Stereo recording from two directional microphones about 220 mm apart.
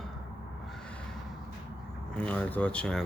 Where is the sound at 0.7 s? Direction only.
5° left (ahead or behind).